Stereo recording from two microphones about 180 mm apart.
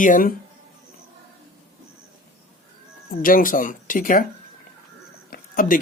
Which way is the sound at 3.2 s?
50° left (ahead or behind).